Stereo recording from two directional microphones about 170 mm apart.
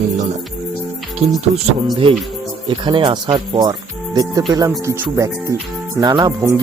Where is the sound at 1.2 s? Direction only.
40° right (ahead or behind).